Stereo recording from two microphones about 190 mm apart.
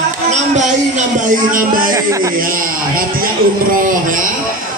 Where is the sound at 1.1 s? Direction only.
45° right (ahead or behind).